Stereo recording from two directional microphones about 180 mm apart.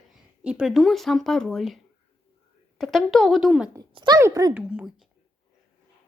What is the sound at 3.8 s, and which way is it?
Speech, 20° right (ahead or behind).